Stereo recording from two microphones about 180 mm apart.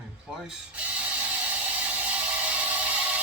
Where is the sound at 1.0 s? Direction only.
10° right (ahead or behind).